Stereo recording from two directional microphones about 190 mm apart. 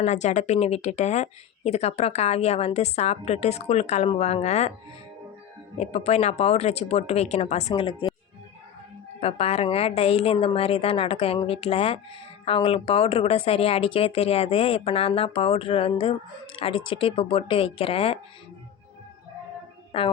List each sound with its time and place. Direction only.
0.0 s speech: 35° left (ahead or behind)
5.7 s speech: 35° left (ahead or behind)
9.2 s speech: 30° left (ahead or behind)
19.9 s a woman's voice: 30° left (ahead or behind)